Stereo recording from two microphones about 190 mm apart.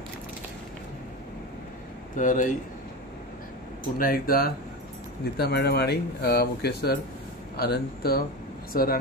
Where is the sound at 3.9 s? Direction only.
50° left (ahead or behind).